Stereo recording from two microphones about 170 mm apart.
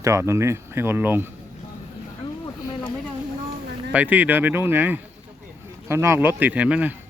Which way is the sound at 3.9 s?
10° right (ahead or behind).